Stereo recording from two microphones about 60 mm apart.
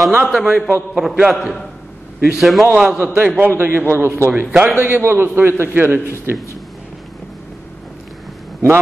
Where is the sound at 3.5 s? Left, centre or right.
Right.